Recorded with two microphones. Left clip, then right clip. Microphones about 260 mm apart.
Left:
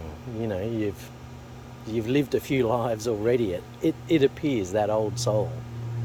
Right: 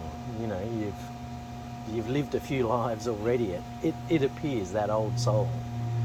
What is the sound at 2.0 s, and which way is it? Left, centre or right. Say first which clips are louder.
Speech: left 7 dB; left.